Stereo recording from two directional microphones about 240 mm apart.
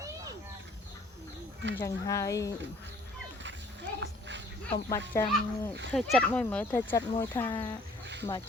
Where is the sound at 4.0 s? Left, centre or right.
Right.